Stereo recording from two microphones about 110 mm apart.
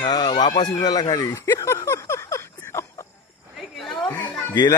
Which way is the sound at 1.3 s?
25° left (ahead or behind).